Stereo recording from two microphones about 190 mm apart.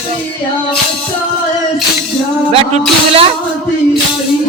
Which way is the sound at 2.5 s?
30° right (ahead or behind).